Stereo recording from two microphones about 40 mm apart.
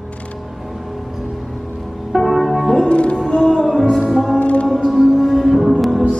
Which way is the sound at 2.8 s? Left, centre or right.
Left.